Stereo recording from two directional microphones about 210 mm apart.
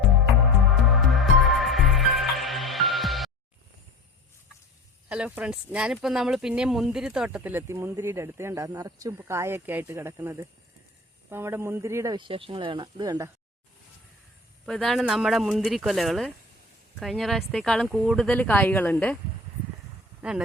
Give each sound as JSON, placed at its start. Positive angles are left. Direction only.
{"t": 0.9, "sound": "music", "side_deg": 0}
{"t": 5.0, "sound": "speech", "side_deg": -5}
{"t": 14.7, "sound": "speech", "side_deg": 0}